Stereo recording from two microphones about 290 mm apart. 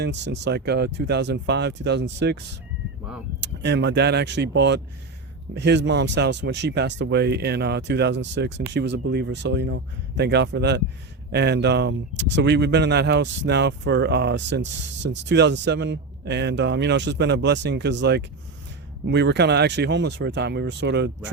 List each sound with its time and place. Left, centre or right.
0.0 s speech: right
3.4 s speech: right